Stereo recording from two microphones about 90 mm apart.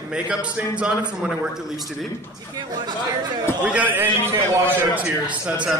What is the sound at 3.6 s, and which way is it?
Speech, 15° right (ahead or behind).